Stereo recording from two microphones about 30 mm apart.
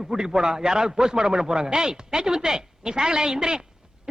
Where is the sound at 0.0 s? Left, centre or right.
Centre.